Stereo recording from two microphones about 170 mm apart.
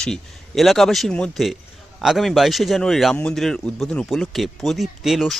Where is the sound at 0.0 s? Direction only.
Centre (ahead or behind).